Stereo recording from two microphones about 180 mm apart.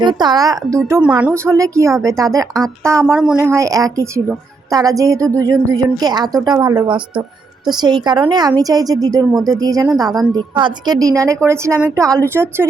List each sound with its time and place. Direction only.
0.0 s a woman's voice: 25° right (ahead or behind)
3.1 s speech: 5° right (ahead or behind)
3.5 s a woman's voice: 20° right (ahead or behind)